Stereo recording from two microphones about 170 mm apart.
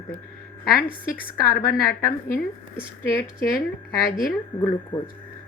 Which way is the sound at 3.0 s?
15° left (ahead or behind).